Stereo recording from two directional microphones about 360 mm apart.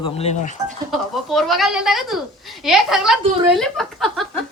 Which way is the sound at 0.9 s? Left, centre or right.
Centre.